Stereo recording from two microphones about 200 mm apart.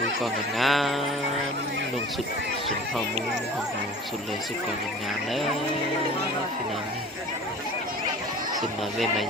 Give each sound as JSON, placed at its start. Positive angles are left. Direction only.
{"t": 0.2, "sound": "speech", "side_deg": 0}